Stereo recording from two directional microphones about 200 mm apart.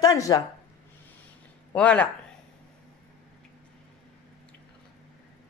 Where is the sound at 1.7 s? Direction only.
5° left (ahead or behind).